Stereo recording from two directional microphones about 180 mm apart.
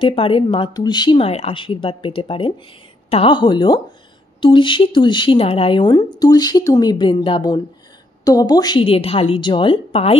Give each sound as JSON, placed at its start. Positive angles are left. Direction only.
{"t": 0.0, "sound": "speech", "side_deg": 30}